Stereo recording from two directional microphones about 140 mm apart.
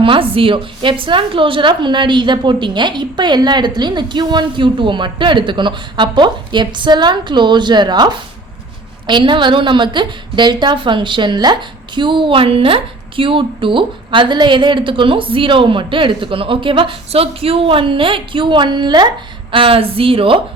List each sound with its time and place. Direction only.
0.0 s a woman's voice: 40° right (ahead or behind)